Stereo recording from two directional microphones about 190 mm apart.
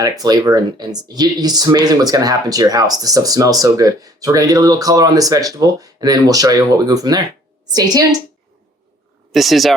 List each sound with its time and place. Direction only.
0.0 s speech: 20° right (ahead or behind)
9.3 s speech: centre (ahead or behind)